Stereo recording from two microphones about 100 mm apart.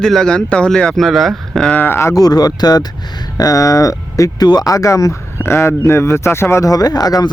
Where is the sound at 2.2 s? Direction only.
40° left (ahead or behind).